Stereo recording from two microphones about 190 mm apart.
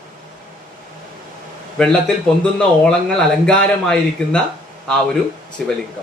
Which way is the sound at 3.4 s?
5° left (ahead or behind).